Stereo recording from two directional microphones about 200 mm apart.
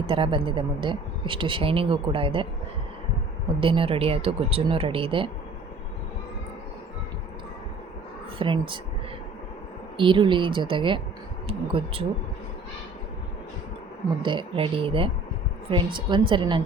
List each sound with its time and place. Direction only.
0.1 s speech: 25° right (ahead or behind)
3.6 s speech: 25° right (ahead or behind)
8.4 s speech: 25° right (ahead or behind)
10.0 s speech: 25° right (ahead or behind)
14.2 s speech: 25° right (ahead or behind)